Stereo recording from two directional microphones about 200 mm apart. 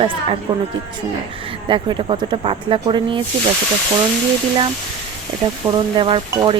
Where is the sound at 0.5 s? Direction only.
15° right (ahead or behind).